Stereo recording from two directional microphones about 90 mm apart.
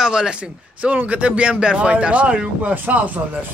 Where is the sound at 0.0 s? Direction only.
10° right (ahead or behind).